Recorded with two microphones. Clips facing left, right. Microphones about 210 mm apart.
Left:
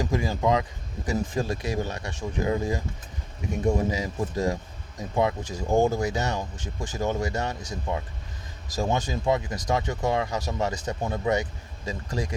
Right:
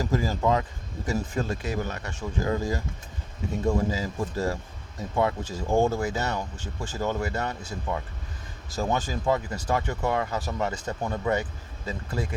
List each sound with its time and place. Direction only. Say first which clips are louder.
0.0 s a man's voice: even; 15° left (ahead or behind)
5.5 s speech: left 1 dB; 5° left (ahead or behind)
5.8 s speech: left 1 dB; 15° left (ahead or behind)